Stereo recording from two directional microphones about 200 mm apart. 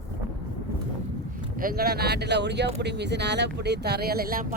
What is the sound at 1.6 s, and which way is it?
Speech, 45° right (ahead or behind).